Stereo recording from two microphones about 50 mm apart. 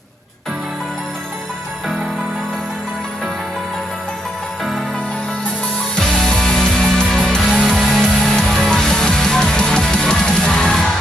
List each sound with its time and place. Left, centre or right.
6.0 s music: centre
7.4 s music: centre